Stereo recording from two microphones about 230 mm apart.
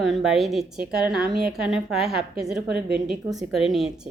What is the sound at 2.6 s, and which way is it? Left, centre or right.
Speech, right.